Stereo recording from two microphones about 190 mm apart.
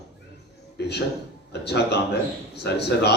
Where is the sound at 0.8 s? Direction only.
60° left (ahead or behind).